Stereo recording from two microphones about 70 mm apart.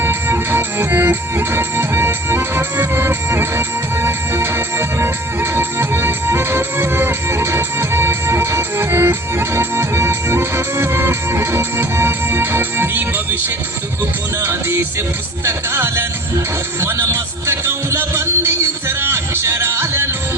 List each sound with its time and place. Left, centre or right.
0.0 s music: right
14.4 s music: right